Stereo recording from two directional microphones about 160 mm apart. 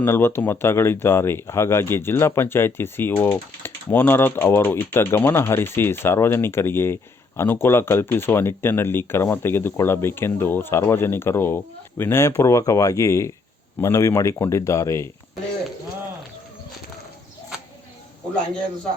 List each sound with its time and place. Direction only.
0.0 s speech: 15° left (ahead or behind)